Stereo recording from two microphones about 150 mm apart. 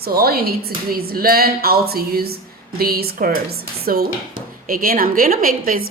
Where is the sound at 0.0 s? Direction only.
90° right.